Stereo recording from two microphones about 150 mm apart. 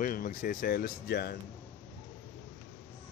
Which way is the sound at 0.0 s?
70° left (ahead or behind).